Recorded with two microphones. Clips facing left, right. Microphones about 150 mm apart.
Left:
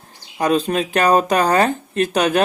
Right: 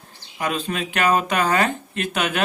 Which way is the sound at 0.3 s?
40° left (ahead or behind).